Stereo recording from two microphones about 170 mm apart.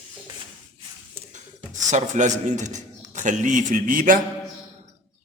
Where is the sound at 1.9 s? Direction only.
45° right (ahead or behind).